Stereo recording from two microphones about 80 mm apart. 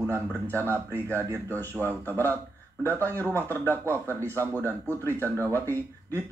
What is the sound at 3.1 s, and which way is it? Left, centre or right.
Speech, right.